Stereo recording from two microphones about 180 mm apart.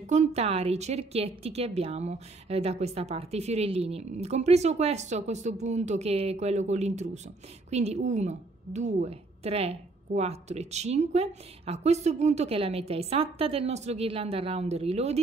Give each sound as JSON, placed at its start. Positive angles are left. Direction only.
{"t": 0.0, "sound": "a woman's voice", "side_deg": -40}